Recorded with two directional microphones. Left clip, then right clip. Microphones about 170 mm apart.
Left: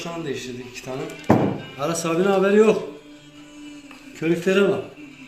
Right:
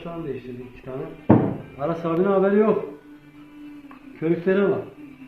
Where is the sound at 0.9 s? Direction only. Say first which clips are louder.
Left 2 dB; 35° left (ahead or behind).